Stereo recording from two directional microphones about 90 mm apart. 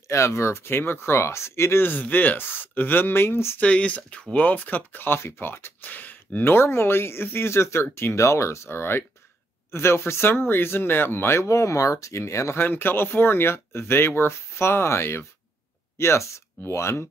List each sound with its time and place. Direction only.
0.1 s speech: 30° left (ahead or behind)
3.6 s speech: 15° left (ahead or behind); by 17.1 s 30° left (ahead or behind)